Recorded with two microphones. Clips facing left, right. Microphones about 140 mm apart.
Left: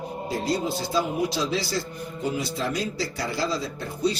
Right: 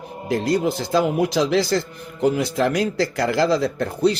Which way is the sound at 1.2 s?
90° right.